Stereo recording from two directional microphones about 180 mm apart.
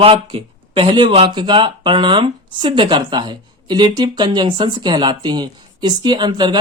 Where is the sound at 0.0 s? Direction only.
30° right (ahead or behind).